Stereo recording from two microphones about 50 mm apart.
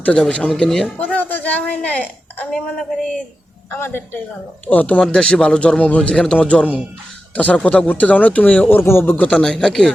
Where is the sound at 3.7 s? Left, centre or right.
Left.